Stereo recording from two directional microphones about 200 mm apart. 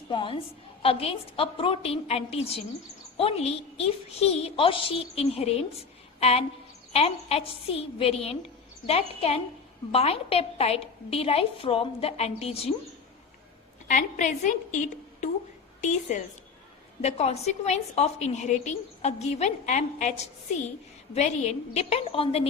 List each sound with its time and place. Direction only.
0.1 s a woman's voice: 25° left (ahead or behind)
13.8 s a woman's voice: 40° left (ahead or behind)
21.8 s a woman's voice: 30° left (ahead or behind)